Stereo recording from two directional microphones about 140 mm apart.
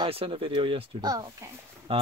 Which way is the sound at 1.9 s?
40° right (ahead or behind).